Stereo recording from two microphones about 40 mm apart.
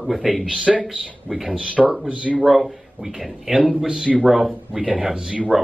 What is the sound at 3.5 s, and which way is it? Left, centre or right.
Speech, right.